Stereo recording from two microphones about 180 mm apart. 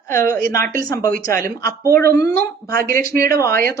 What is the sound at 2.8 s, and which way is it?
Speech, 55° right (ahead or behind).